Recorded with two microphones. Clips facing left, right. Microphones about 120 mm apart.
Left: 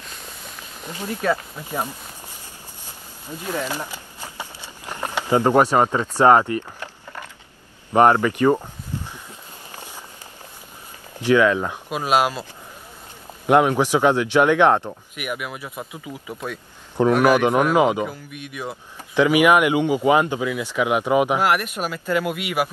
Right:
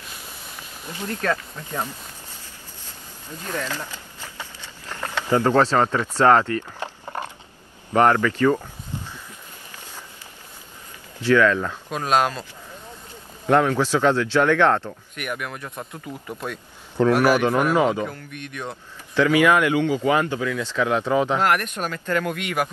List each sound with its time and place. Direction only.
0.9 s speech: 10° left (ahead or behind)
3.3 s speech: 15° left (ahead or behind)
7.9 s speech: 15° left (ahead or behind)
11.1 s speech: 15° left (ahead or behind)
13.5 s speech: 15° left (ahead or behind)
17.2 s speech: 20° left (ahead or behind)